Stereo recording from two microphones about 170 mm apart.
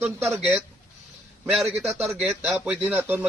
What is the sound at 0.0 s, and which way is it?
Speech, 10° right (ahead or behind).